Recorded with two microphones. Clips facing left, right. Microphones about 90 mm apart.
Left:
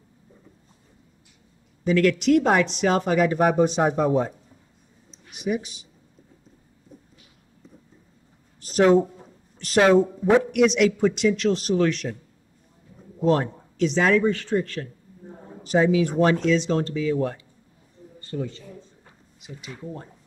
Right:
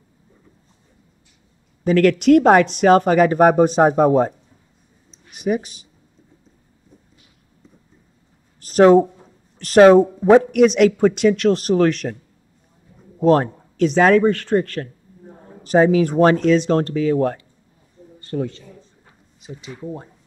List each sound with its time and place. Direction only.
1.9 s speech: 50° right (ahead or behind)
5.3 s speech: 45° right (ahead or behind)
8.5 s a sound: 45° right (ahead or behind)
9.6 s speech: 45° right (ahead or behind)
13.2 s speech: 50° right (ahead or behind)
15.6 s speech: 45° right (ahead or behind); by 18.6 s 60° right (ahead or behind)
19.4 s speech: 25° right (ahead or behind)